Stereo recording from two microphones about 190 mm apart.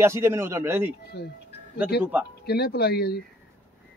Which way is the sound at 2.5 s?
55° left (ahead or behind).